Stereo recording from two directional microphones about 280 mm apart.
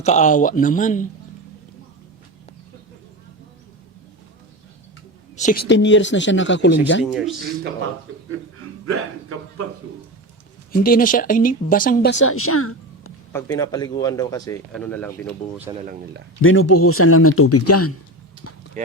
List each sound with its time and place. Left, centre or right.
0.0 s speech: left
5.4 s speech: left
5.6 s speech: left
7.0 s speech: centre
10.7 s speech: left
12.2 s a woman's voice: left
13.3 s speech: centre
15.7 s speech: centre
16.4 s speech: left